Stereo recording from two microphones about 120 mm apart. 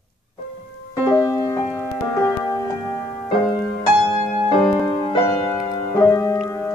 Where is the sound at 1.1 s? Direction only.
25° left (ahead or behind).